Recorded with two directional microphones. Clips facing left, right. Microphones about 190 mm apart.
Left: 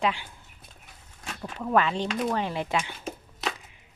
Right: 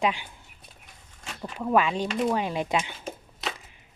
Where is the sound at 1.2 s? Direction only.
5° right (ahead or behind).